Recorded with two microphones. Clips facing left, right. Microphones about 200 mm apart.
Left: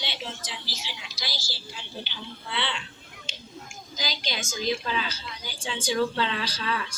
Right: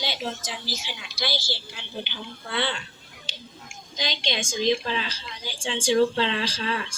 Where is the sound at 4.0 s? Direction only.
30° right (ahead or behind).